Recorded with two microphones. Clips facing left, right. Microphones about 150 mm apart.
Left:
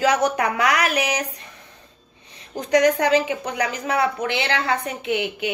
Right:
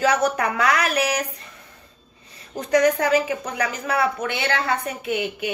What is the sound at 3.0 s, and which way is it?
Speech, 20° left (ahead or behind).